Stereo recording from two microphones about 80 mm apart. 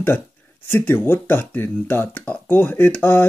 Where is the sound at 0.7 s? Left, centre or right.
Left.